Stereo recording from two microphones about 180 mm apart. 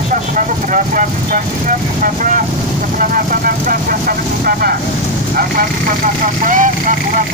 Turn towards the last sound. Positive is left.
turn(degrees=-45)  # may be behind; listen again after turning